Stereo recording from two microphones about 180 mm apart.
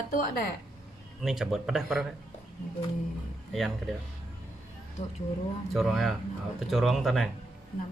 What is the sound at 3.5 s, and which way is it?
Speech, centre (ahead or behind).